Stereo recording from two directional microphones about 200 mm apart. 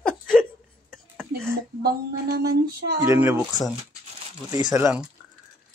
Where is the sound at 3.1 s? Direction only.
15° right (ahead or behind).